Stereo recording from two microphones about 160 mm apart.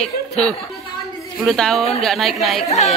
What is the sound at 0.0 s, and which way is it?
A woman's voice, 5° left (ahead or behind).